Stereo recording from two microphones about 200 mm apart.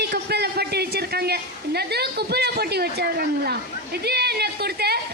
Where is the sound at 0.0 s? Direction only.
55° right (ahead or behind).